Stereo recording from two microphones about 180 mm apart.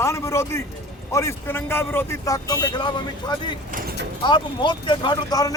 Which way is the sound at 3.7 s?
50° right (ahead or behind).